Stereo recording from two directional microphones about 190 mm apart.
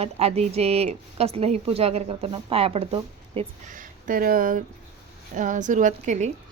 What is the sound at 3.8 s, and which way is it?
Speech, 45° right (ahead or behind).